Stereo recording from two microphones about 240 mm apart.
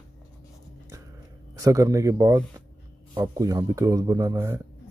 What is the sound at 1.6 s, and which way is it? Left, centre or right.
Speech, centre.